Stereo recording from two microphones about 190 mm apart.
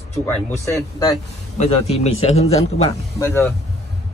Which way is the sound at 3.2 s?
15° left (ahead or behind).